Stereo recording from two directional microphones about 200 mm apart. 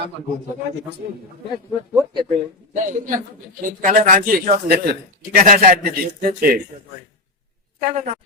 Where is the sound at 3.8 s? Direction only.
40° right (ahead or behind).